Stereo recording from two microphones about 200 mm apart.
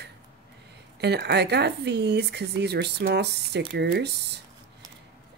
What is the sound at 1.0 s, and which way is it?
Speech, 55° right (ahead or behind).